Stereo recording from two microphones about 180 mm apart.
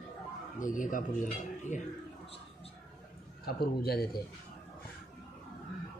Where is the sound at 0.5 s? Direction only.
45° left (ahead or behind).